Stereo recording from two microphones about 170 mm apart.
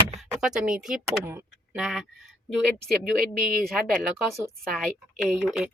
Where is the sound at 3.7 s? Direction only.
Centre (ahead or behind).